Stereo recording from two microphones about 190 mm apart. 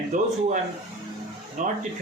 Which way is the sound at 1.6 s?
40° right (ahead or behind).